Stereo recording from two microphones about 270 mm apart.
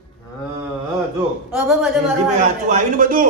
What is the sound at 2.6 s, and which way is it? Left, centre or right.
Speech, right.